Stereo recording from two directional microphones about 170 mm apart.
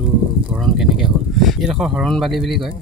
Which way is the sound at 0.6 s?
Centre (ahead or behind).